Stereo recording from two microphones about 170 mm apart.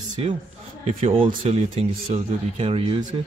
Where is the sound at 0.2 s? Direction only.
35° right (ahead or behind).